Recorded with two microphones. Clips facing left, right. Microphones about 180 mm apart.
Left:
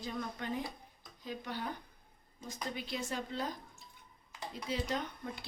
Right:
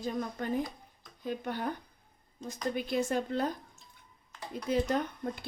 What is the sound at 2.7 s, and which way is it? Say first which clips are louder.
Speech: right 10 dB; 50° right (ahead or behind).